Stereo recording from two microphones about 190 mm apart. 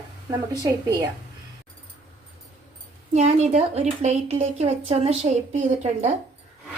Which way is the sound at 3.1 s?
35° right (ahead or behind).